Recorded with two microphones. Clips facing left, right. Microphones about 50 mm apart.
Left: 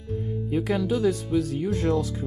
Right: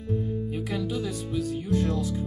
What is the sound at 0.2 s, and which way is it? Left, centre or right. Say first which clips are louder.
Speech: left 3 dB; left.